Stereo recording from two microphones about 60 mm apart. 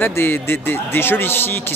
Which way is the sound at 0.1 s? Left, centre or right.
Left.